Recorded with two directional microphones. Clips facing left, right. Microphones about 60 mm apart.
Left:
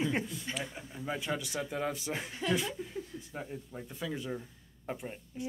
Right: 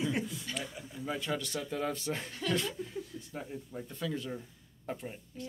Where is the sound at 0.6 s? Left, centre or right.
Left.